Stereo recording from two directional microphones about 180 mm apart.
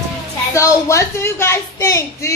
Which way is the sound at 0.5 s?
15° left (ahead or behind).